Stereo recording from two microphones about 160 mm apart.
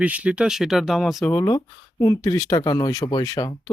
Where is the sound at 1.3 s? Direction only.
20° left (ahead or behind).